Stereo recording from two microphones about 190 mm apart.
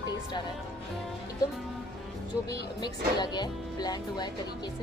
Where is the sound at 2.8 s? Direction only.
20° left (ahead or behind).